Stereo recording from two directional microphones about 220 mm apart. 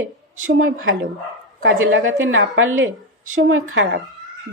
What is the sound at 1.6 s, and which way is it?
Speech, 60° right (ahead or behind).